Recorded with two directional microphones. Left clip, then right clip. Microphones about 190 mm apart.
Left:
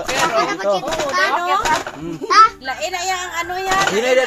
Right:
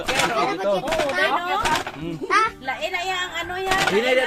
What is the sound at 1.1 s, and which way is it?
A child's voice, 40° left (ahead or behind).